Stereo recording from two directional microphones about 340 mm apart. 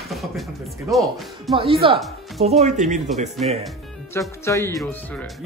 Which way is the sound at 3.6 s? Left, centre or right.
Centre.